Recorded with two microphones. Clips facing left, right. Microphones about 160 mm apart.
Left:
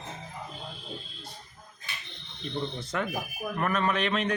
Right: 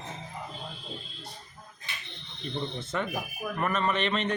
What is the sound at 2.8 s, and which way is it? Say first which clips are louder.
Speech: even; 10° left (ahead or behind).